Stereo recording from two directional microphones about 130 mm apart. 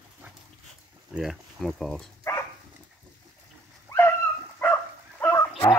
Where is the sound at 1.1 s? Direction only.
5° right (ahead or behind).